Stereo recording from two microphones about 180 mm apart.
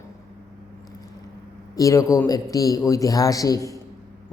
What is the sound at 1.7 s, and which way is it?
A man's voice, 20° left (ahead or behind).